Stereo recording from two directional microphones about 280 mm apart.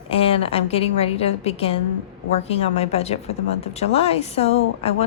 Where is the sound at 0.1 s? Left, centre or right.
Left.